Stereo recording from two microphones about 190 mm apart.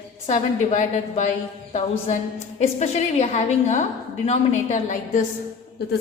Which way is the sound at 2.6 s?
35° left (ahead or behind).